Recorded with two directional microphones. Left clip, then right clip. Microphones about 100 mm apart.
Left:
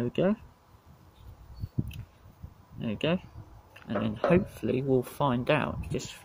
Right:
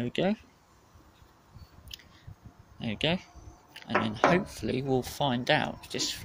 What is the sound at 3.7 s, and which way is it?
Speech, 65° left (ahead or behind).